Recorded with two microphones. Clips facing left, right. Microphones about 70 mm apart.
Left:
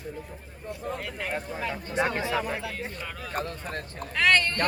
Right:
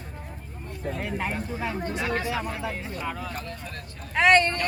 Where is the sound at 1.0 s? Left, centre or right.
Right.